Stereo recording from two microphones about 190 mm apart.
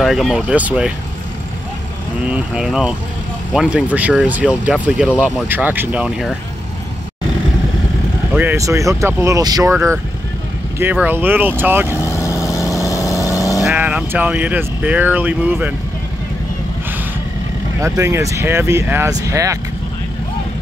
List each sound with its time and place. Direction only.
0.0 s speech: centre (ahead or behind)
2.2 s speech: 5° right (ahead or behind)
8.3 s speech: 10° right (ahead or behind)
12.0 s vehicle: 15° left (ahead or behind)
13.7 s speech: 10° right (ahead or behind)
17.7 s speech: 15° right (ahead or behind)